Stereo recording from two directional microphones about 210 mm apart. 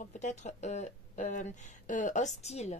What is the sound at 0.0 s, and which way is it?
Speech, 35° left (ahead or behind).